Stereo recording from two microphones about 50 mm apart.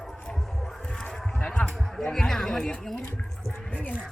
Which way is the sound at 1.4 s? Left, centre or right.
Left.